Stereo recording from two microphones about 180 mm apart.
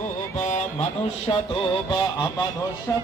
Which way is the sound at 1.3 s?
25° left (ahead or behind).